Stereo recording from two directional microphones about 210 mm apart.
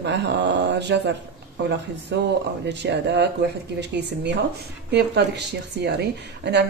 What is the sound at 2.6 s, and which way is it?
Speech, 55° right (ahead or behind).